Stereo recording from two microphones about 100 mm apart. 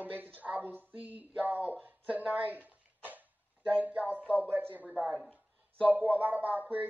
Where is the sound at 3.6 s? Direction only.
15° right (ahead or behind).